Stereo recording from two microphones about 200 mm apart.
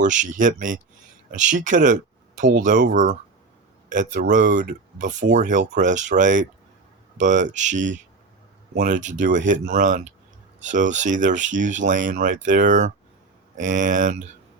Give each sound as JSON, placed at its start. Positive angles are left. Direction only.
{"t": 0.0, "sound": "speech", "side_deg": -40}